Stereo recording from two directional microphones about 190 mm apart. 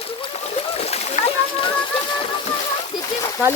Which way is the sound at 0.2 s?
30° left (ahead or behind).